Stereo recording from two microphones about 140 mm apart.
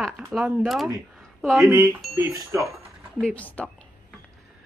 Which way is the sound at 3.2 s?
10° left (ahead or behind).